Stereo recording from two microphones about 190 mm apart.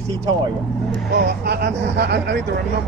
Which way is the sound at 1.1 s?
60° right (ahead or behind).